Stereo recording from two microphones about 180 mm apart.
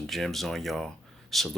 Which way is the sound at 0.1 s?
Centre (ahead or behind).